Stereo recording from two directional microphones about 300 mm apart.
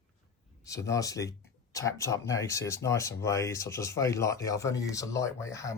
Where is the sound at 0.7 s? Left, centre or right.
Centre.